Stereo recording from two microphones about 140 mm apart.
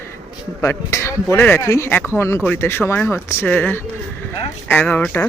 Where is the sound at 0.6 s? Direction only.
20° left (ahead or behind).